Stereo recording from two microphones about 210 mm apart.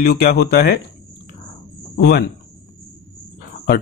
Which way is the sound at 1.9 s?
50° left (ahead or behind).